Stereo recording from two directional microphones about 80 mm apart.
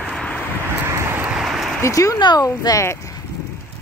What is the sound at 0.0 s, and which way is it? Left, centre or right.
Vehicle, centre.